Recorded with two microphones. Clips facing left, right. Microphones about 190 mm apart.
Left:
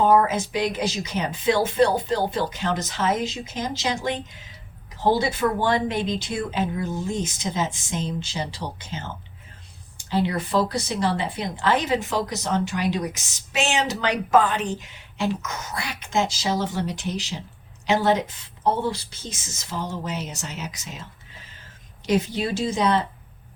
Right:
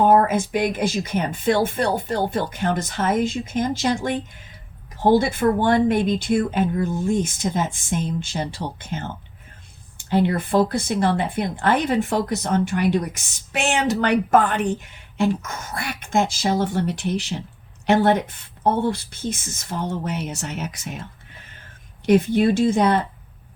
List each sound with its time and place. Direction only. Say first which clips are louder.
0.0 s speech: right 2 dB; 55° right (ahead or behind)
10.1 s speech: right 4 dB; 50° right (ahead or behind)